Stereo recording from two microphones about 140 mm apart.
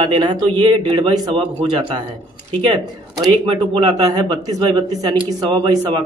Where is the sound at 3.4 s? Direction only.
35° right (ahead or behind).